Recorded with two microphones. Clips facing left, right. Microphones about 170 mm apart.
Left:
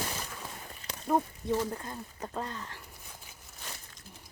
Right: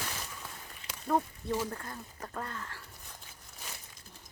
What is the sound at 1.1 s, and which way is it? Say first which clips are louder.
Speech: left 2 dB; 15° left (ahead or behind).